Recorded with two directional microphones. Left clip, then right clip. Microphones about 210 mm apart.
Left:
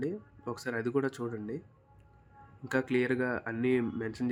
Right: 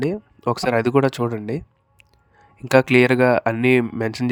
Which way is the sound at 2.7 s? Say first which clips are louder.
Right 15 dB; 45° right (ahead or behind).